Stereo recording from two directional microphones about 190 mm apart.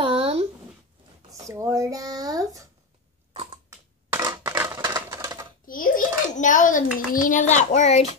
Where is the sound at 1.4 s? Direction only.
15° right (ahead or behind).